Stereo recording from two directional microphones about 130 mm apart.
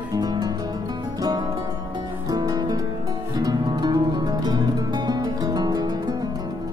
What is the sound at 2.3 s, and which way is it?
Music, 30° right (ahead or behind).